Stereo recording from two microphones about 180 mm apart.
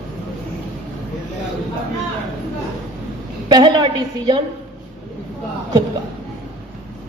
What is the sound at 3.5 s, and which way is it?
Speech, 25° right (ahead or behind).